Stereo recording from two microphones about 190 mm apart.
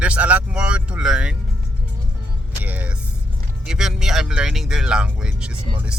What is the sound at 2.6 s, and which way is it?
Speech, 10° right (ahead or behind).